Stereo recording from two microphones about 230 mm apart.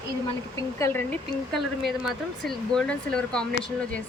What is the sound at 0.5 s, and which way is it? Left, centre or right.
Speech, centre.